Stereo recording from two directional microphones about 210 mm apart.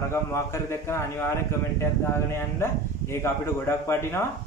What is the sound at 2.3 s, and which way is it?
Speech, 10° left (ahead or behind).